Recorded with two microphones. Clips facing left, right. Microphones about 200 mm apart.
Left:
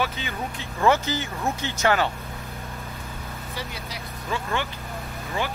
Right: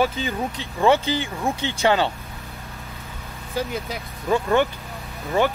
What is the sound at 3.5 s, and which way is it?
Speech, 50° right (ahead or behind).